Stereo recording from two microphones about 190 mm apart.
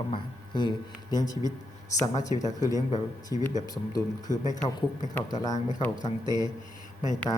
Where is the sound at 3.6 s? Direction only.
20° left (ahead or behind).